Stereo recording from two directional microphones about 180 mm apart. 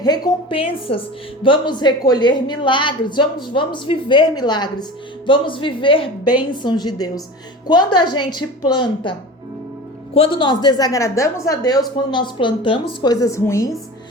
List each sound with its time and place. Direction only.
0.0 s a woman's voice: 25° left (ahead or behind)
10.2 s a woman's voice: 25° left (ahead or behind)